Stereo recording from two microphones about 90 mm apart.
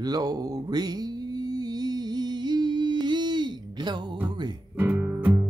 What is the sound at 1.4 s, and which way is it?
Humming, 45° right (ahead or behind).